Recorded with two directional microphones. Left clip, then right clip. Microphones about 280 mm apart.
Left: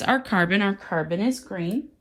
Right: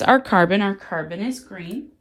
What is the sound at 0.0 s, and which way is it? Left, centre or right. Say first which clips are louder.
Speech: right 7 dB; centre.